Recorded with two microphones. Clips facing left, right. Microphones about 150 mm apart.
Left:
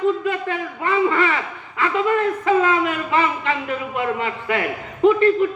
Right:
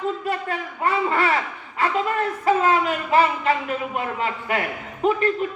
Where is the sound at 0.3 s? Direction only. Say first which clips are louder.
Left 3 dB; 35° right (ahead or behind).